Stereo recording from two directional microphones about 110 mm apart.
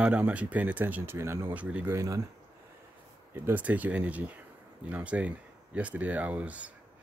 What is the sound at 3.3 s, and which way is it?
Speech, 15° right (ahead or behind).